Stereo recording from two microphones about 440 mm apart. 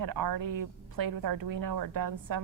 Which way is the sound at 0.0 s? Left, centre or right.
Right.